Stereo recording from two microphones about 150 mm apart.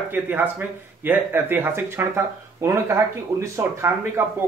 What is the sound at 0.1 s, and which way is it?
A man's voice, 15° right (ahead or behind).